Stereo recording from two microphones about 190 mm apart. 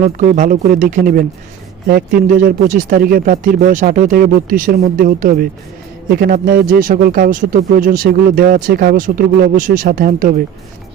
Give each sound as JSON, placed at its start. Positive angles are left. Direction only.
{"t": 0.0, "sound": "speech", "side_deg": -40}